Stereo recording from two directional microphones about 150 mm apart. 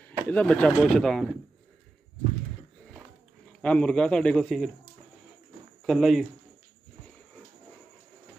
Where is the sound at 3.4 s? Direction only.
5° left (ahead or behind).